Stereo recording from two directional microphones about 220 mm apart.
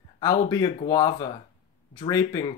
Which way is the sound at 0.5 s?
15° left (ahead or behind).